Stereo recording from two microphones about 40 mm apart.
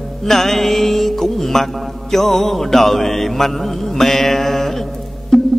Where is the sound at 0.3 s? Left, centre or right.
Centre.